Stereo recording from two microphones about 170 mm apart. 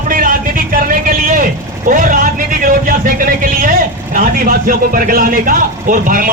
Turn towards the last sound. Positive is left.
turn(degrees=-55)  # may be behind; listen again after turning